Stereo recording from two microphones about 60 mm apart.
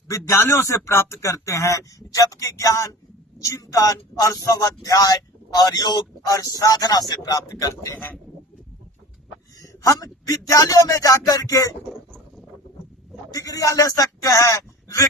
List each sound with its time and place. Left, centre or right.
0.1 s a man's voice: left
9.6 s speech: left
13.3 s speech: left